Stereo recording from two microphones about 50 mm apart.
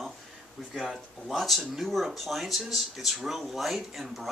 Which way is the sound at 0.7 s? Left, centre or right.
Centre.